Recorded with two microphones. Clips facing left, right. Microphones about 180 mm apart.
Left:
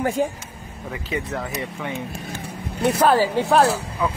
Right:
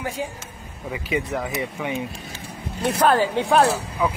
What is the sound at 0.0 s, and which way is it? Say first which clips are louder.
Speech: left 7 dB; 50° left (ahead or behind).